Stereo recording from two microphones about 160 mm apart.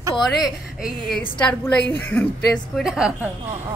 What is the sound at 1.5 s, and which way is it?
A woman's voice, 10° left (ahead or behind).